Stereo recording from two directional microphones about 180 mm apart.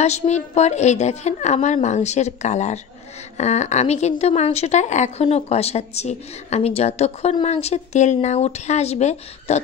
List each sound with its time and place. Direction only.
0.0 s speech: 40° left (ahead or behind)